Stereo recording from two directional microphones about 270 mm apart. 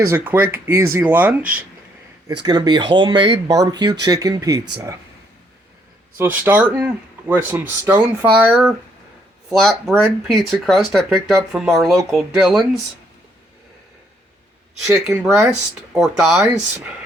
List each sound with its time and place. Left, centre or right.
0.0 s speech: centre
2.4 s speech: centre
6.1 s speech: centre
14.8 s speech: centre